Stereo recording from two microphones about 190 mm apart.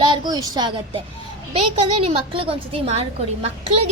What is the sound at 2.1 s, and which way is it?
A woman's voice, 30° right (ahead or behind).